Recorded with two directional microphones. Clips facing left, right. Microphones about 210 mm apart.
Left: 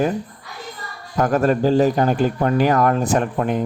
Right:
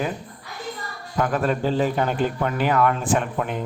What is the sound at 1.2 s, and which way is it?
A man's voice, 45° left (ahead or behind).